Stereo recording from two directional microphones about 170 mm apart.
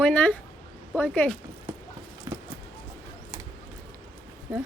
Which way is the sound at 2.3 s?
15° right (ahead or behind).